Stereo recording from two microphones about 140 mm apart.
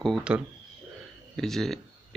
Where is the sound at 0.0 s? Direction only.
5° right (ahead or behind).